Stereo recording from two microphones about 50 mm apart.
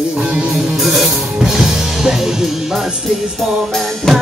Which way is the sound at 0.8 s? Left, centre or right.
Centre.